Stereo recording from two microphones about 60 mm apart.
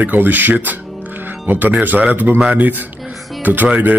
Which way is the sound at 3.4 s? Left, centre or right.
Right.